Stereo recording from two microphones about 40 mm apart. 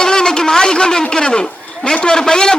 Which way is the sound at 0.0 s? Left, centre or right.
Centre.